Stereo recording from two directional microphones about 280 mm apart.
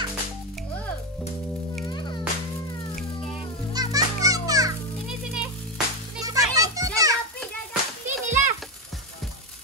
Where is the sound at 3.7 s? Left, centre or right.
Centre.